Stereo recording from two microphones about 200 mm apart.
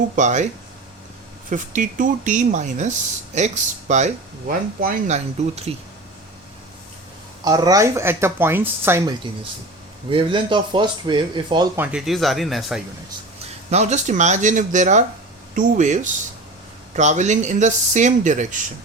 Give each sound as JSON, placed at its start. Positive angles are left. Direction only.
{"t": 0.2, "sound": "speech", "side_deg": -35}
{"t": 1.5, "sound": "speech", "side_deg": -40}
{"t": 7.4, "sound": "speech", "side_deg": -20}
{"t": 11.8, "sound": "speech", "side_deg": -5}
{"t": 13.7, "sound": "speech", "side_deg": -35}